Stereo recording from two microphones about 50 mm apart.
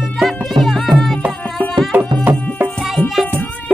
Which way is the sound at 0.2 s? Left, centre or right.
Centre.